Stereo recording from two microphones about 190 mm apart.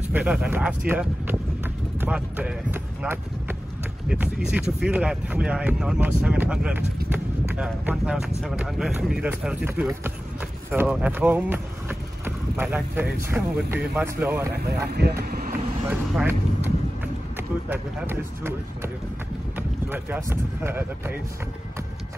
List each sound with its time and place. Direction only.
0.1 s speech: 5° right (ahead or behind)
14.9 s speech: 55° right (ahead or behind)
15.9 s speech: 10° right (ahead or behind)
19.9 s speech: 10° right (ahead or behind)